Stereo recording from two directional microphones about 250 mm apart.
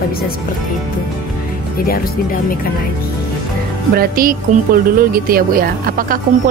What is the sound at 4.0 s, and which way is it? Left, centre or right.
Speech, right.